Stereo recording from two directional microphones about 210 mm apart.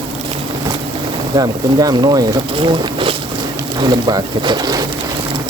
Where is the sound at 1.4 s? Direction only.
20° right (ahead or behind).